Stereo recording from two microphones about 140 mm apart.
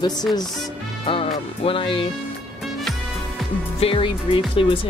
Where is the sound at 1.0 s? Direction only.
40° left (ahead or behind).